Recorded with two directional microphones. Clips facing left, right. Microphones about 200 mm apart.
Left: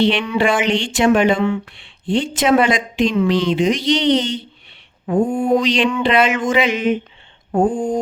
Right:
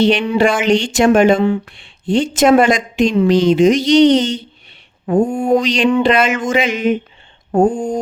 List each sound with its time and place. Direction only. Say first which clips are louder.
0.0 s speech: right 3 dB; 40° right (ahead or behind)
7.7 s speech: even; 5° left (ahead or behind)